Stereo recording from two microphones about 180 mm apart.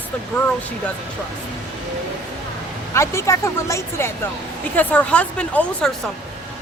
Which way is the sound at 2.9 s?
15° left (ahead or behind).